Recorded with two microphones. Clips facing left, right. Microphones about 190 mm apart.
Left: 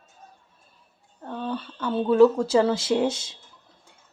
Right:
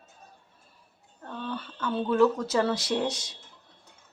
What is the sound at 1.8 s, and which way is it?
Speech, 30° left (ahead or behind).